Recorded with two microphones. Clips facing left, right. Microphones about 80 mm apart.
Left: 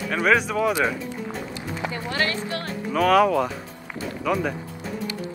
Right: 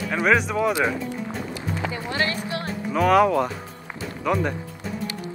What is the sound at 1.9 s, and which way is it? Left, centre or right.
Speech, centre.